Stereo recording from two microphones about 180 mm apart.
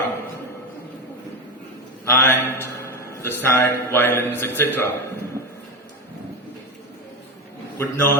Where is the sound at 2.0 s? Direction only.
15° left (ahead or behind).